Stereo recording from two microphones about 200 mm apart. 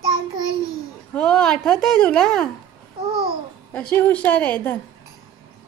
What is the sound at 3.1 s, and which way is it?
Babbling, 25° right (ahead or behind).